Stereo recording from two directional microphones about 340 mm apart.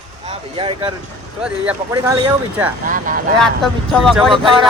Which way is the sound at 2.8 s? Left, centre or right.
Right.